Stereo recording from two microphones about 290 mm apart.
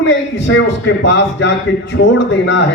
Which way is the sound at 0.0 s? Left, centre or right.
Left.